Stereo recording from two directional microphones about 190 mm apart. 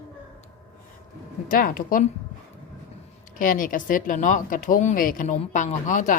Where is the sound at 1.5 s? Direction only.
45° left (ahead or behind).